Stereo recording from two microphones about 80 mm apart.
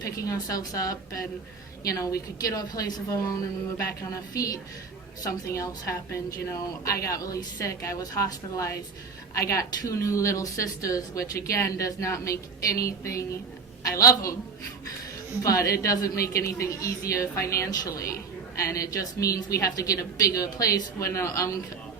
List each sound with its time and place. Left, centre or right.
0.0 s a woman's voice: left
15.4 s a woman's voice: left